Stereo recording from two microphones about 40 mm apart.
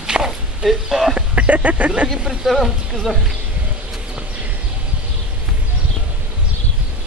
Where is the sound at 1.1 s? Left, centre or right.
Right.